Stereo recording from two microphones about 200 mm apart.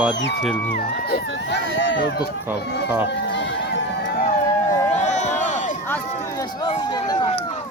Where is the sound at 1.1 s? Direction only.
65° left (ahead or behind).